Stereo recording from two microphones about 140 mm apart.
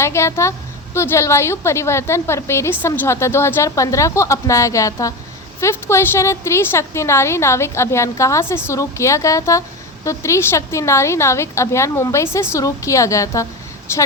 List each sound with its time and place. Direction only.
0.0 s a woman's voice: 20° left (ahead or behind)